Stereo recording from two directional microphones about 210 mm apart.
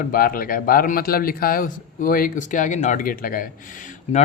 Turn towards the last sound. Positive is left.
turn(degrees=40)  # may be behind; listen again after turning